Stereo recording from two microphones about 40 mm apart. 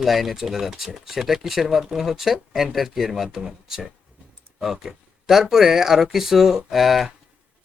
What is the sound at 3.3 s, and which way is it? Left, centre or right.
Speech, centre.